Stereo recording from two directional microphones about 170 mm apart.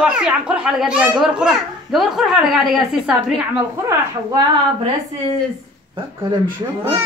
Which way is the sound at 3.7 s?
20° right (ahead or behind).